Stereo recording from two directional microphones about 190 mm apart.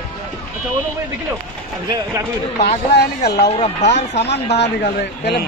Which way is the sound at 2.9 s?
60° left (ahead or behind).